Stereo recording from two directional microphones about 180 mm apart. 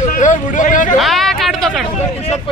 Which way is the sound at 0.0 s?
45° left (ahead or behind).